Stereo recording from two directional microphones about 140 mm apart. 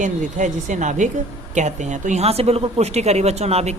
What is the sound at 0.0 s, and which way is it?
Speech, 60° right (ahead or behind).